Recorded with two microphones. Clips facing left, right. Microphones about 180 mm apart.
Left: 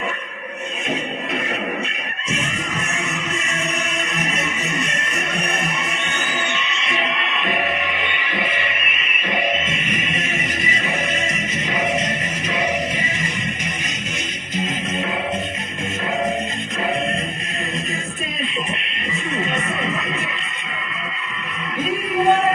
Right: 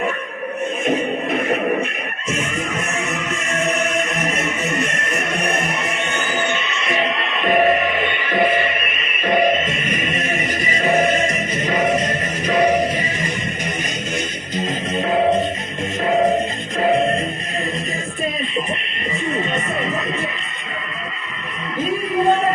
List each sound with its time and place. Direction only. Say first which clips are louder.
3.6 s music: right 10 dB; 55° right (ahead or behind)
14.5 s music: right 2 dB; 40° right (ahead or behind)
16.8 s music: right 7 dB; 35° right (ahead or behind)